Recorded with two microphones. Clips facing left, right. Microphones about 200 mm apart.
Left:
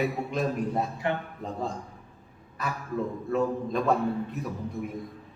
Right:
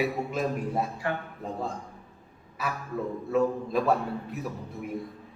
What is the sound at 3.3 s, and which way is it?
Speech, 5° right (ahead or behind).